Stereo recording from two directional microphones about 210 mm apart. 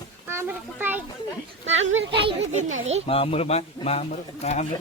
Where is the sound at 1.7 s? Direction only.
60° right (ahead or behind).